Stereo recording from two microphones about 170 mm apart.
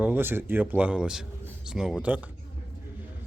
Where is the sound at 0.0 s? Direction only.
10° right (ahead or behind).